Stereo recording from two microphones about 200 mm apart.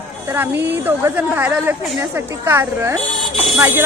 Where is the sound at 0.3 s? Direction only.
10° right (ahead or behind).